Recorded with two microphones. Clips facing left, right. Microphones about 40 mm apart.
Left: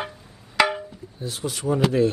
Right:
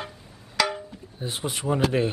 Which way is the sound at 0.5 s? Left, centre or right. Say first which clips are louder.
Left 5 dB; left.